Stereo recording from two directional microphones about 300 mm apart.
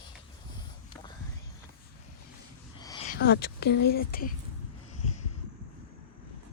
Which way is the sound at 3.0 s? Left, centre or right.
Left.